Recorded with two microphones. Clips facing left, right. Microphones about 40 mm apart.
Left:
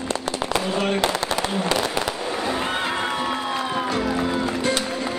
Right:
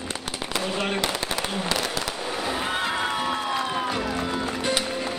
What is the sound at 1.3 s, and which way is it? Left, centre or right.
Fireworks, centre.